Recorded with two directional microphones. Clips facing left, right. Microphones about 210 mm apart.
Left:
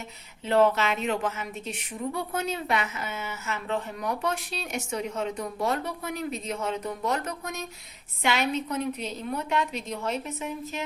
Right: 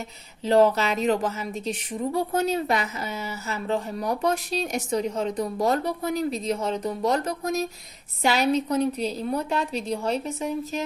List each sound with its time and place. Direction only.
0.4 s a woman's voice: 35° right (ahead or behind)